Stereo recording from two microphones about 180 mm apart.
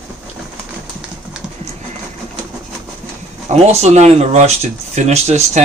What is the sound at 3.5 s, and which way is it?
Speech, 35° right (ahead or behind).